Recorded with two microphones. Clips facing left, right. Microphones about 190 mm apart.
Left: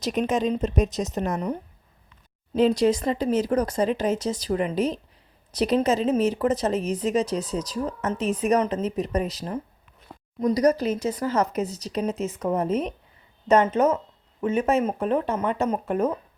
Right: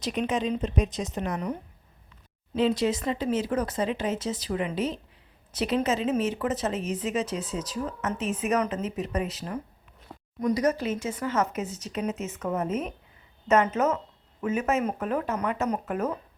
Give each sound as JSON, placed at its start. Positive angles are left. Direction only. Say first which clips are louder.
{"t": 0.0, "sound": "a woman's voice", "louder": "left 4 dB", "side_deg": 45}
{"t": 2.6, "sound": "speech", "louder": "left 5 dB", "side_deg": 40}